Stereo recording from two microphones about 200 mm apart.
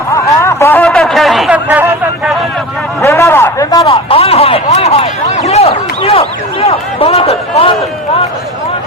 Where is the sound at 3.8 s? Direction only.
30° left (ahead or behind).